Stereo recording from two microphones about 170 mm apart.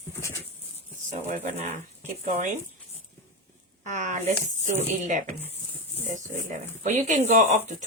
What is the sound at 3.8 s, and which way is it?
Speech, 45° right (ahead or behind).